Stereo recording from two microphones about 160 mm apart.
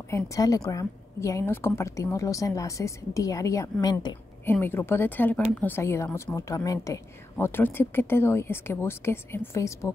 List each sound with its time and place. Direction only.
0.1 s a woman's voice: 20° left (ahead or behind)
4.5 s a woman's voice: 15° left (ahead or behind)